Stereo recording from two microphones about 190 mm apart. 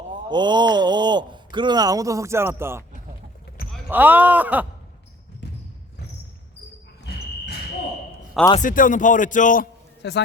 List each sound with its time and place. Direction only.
0.3 s speech: 25° right (ahead or behind)
3.8 s speech: 10° right (ahead or behind)
8.6 s speech: 45° left (ahead or behind)
10.0 s a man's voice: 65° left (ahead or behind)